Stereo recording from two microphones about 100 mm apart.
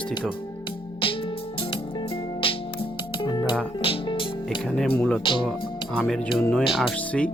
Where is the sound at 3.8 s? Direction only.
60° left (ahead or behind).